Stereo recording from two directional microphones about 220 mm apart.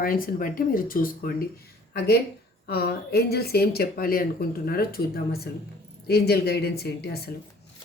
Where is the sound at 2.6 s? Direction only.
45° left (ahead or behind).